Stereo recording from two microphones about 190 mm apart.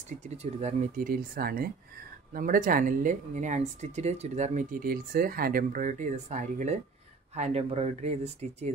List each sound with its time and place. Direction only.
0.2 s speech: 35° right (ahead or behind)